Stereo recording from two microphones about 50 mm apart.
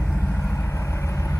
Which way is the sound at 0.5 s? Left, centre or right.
Left.